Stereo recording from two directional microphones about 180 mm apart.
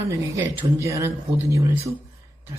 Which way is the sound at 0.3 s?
15° right (ahead or behind).